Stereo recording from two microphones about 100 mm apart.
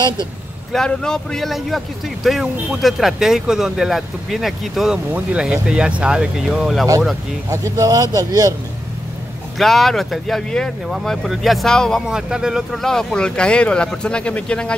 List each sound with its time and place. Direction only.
0.7 s speech: 5° left (ahead or behind)
7.4 s a man's voice: 35° right (ahead or behind)
9.6 s speech: centre (ahead or behind)
12.1 s speech: 5° right (ahead or behind)
12.8 s speech: 5° left (ahead or behind)